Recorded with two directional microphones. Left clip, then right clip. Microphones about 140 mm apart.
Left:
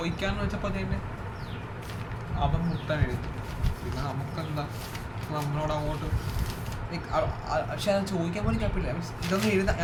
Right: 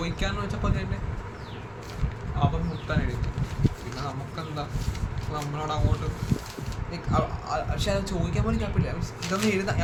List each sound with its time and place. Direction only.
0.0 s speech: 25° right (ahead or behind)
2.9 s speech: 20° right (ahead or behind)
5.3 s speech: 25° right (ahead or behind)
6.9 s speech: 25° right (ahead or behind)